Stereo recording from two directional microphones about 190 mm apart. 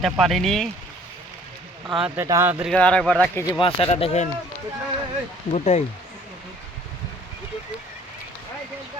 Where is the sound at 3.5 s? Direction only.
30° left (ahead or behind).